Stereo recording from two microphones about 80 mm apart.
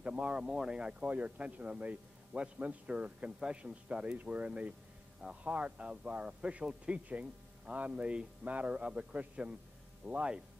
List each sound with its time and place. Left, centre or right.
0.0 s speech: centre